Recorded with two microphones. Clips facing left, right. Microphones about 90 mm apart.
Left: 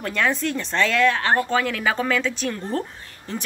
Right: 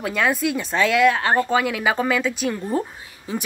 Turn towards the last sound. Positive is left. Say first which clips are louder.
# right 3 dB
turn(degrees=-10)  # may be behind; listen again after turning